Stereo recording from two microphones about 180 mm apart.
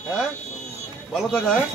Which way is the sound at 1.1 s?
Centre (ahead or behind).